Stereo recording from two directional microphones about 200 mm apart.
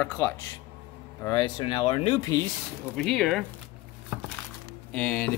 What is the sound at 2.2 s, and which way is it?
Dishes, 15° left (ahead or behind).